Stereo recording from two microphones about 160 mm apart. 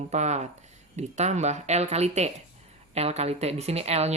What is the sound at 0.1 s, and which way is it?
Speech, 45° right (ahead or behind).